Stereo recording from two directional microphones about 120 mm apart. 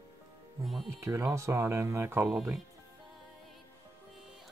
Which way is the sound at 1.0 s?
25° right (ahead or behind).